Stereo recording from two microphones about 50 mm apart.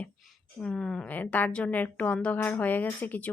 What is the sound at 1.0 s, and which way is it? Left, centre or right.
Speech, left.